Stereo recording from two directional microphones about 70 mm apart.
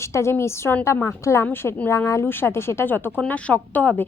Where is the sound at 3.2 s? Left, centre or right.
Centre.